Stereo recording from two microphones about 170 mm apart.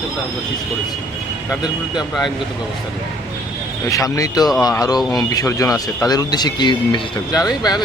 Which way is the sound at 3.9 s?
20° left (ahead or behind).